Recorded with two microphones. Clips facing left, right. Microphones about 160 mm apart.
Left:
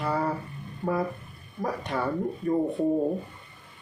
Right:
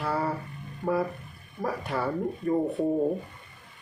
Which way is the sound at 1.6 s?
5° right (ahead or behind).